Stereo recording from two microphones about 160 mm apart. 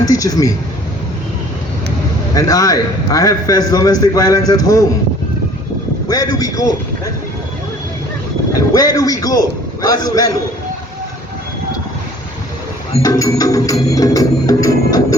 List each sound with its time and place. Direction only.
0.1 s a man's voice: 20° left (ahead or behind)
2.3 s a man's voice: 20° left (ahead or behind)
6.1 s a man's voice: 25° left (ahead or behind)
8.5 s a man's voice: 25° left (ahead or behind)
13.0 s a man's voice: 20° left (ahead or behind)